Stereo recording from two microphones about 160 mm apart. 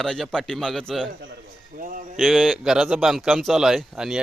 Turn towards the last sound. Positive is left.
turn(degrees=-5)  # may be behind; listen again after turning